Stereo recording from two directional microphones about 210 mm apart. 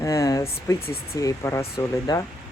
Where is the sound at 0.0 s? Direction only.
15° left (ahead or behind).